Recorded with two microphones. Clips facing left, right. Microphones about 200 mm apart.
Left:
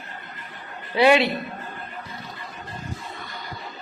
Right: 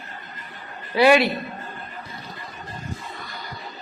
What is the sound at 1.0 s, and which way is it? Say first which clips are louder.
Speech: right 1 dB; 25° left (ahead or behind).